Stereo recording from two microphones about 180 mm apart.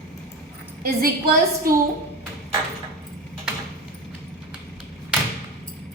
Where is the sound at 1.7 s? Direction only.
50° right (ahead or behind).